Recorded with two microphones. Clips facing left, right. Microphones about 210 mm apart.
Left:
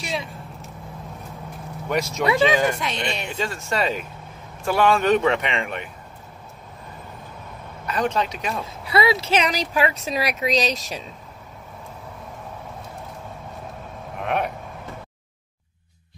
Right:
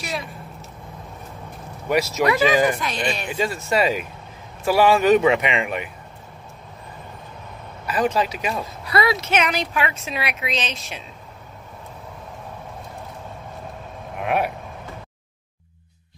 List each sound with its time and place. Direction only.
0.0 s speech: centre (ahead or behind)
1.9 s speech: 5° right (ahead or behind)
2.8 s speech: 25° left (ahead or behind)
3.3 s speech: 5° right (ahead or behind)
7.8 s speech: 5° right (ahead or behind)
8.9 s a woman's voice: 30° left (ahead or behind)
14.2 s speech: 5° right (ahead or behind)